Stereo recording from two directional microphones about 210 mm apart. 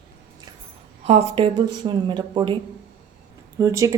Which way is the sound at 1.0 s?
30° right (ahead or behind).